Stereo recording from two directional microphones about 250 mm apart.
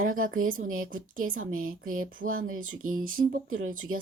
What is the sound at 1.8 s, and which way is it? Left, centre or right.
Speech, right.